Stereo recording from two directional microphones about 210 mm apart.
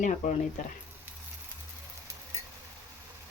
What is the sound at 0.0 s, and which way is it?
Speech, 35° left (ahead or behind).